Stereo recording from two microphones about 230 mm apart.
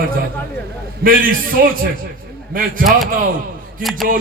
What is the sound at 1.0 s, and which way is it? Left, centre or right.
Mantra, right.